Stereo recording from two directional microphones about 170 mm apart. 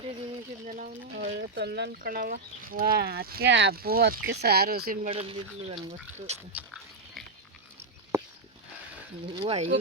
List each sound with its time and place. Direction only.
0.6 s speech: 50° right (ahead or behind)
1.4 s speech: 75° right (ahead or behind)
5.0 s speech: 35° right (ahead or behind)
6.7 s a sound: centre (ahead or behind)
9.3 s speech: 30° right (ahead or behind)